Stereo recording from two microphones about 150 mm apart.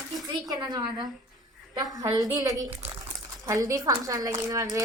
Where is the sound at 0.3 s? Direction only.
25° right (ahead or behind).